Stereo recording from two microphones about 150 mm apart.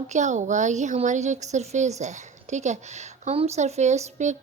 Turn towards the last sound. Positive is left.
turn(degrees=-50)  # may be behind; listen again after turning